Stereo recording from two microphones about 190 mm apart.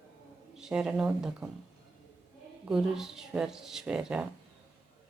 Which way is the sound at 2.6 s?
5° right (ahead or behind).